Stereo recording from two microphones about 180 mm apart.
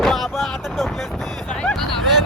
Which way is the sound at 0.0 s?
Centre (ahead or behind).